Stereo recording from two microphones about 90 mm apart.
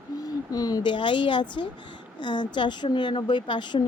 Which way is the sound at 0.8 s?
65° left (ahead or behind).